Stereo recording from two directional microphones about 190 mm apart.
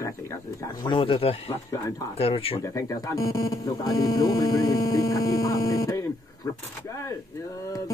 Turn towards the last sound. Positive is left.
turn(degrees=20)  # may be behind; listen again after turning